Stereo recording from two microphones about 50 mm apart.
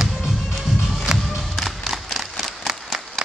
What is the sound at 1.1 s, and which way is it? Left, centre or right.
Crowd, centre.